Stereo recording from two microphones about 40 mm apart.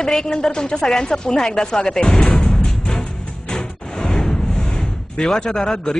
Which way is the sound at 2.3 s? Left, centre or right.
Left.